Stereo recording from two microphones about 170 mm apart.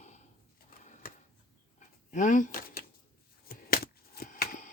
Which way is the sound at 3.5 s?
60° left (ahead or behind).